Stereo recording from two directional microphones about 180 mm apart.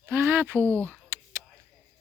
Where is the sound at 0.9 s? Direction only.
15° right (ahead or behind).